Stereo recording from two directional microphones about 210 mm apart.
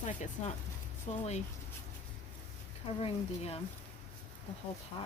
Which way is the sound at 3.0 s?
30° left (ahead or behind).